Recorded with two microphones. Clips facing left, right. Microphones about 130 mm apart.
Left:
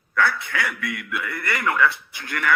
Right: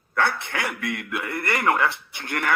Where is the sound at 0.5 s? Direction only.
55° right (ahead or behind).